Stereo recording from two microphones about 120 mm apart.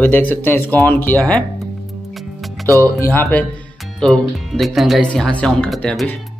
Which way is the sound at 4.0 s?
5° left (ahead or behind).